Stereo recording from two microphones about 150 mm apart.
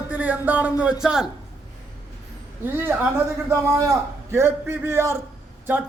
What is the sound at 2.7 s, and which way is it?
Speech, 15° right (ahead or behind).